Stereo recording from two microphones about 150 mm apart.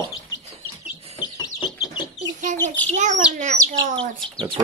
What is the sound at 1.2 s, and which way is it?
Bird, 30° left (ahead or behind).